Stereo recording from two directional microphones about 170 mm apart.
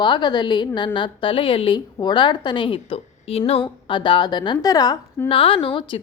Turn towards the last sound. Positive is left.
turn(degrees=30)  # may be behind; listen again after turning